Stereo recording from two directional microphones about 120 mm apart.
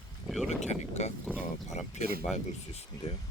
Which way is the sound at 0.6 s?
70° left (ahead or behind).